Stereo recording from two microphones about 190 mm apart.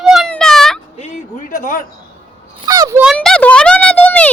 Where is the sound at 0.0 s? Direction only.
Centre (ahead or behind).